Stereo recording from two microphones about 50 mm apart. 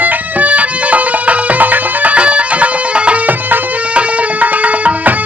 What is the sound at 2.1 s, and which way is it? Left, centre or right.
Music, right.